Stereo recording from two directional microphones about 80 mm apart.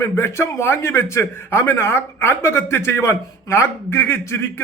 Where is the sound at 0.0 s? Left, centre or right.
Left.